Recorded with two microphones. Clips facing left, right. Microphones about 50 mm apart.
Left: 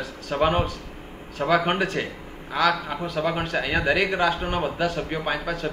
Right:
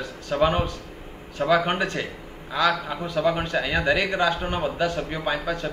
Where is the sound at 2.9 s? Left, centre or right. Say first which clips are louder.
Left 1 dB; centre.